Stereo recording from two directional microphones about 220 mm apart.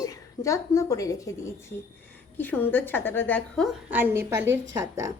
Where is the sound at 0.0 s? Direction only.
15° left (ahead or behind).